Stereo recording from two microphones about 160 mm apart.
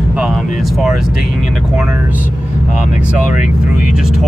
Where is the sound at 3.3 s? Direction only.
55° left (ahead or behind).